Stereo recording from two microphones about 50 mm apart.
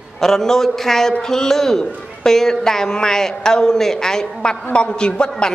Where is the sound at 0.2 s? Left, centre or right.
Centre.